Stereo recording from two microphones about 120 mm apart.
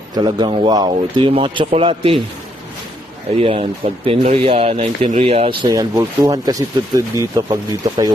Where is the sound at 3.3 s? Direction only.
50° right (ahead or behind).